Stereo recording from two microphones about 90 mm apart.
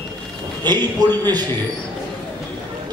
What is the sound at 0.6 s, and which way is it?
Speech, 50° right (ahead or behind).